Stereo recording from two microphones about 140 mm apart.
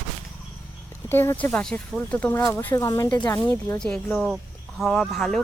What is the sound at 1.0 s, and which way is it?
Speech, 15° left (ahead or behind).